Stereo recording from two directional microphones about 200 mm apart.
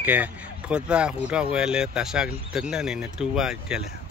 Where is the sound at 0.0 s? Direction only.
10° right (ahead or behind).